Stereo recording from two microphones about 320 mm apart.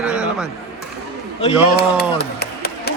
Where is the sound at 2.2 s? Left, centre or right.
Left.